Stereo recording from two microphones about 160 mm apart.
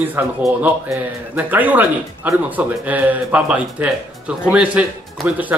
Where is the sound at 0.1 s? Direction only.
10° right (ahead or behind).